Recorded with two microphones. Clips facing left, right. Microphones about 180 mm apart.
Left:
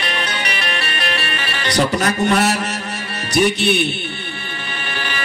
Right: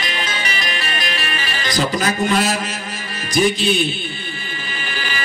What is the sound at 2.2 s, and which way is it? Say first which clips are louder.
A man's voice: left 2 dB; 65° left (ahead or behind).